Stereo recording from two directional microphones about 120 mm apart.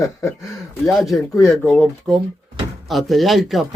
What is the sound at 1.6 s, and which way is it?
Speech, 15° left (ahead or behind).